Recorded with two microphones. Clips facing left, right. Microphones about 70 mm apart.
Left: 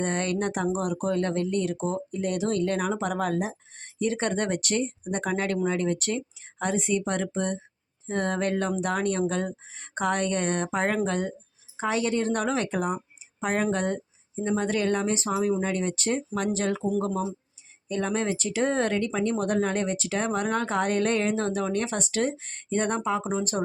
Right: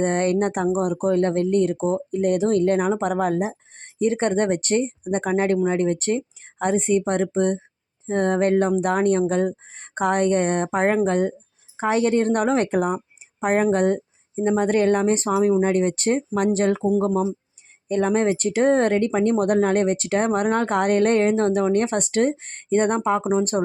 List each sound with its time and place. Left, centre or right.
0.0 s speech: right
9.7 s speech: right
13.4 s speech: right
13.7 s speech: right
15.3 s speech: right
15.7 s speech: right